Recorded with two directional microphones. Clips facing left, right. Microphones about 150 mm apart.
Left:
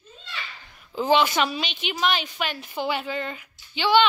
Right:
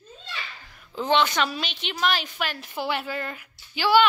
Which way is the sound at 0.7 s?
5° left (ahead or behind).